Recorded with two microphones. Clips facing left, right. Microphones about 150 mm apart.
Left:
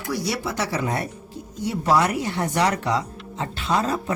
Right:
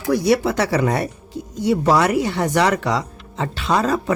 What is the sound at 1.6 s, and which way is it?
Speech, 90° right.